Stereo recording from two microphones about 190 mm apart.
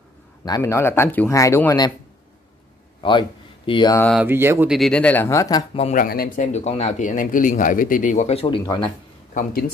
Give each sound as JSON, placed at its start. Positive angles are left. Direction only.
{"t": 0.5, "sound": "speech", "side_deg": 15}
{"t": 3.0, "sound": "speech", "side_deg": 25}
{"t": 4.0, "sound": "speech", "side_deg": 0}
{"t": 4.3, "sound": "speech", "side_deg": -10}
{"t": 4.7, "sound": "speech", "side_deg": 5}
{"t": 5.8, "sound": "speech", "side_deg": 35}
{"t": 6.0, "sound": "speech", "side_deg": 50}
{"t": 9.3, "sound": "speech", "side_deg": 45}